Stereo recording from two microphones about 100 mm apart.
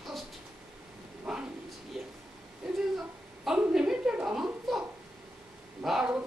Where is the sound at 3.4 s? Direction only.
5° right (ahead or behind).